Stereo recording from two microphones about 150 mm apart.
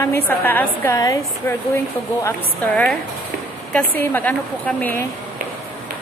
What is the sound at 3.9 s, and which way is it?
A woman's voice, 10° left (ahead or behind).